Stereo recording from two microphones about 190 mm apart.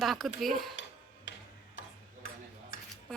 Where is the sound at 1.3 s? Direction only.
75° left (ahead or behind).